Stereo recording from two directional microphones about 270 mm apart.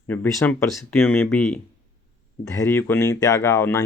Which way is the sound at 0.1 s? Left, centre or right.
Centre.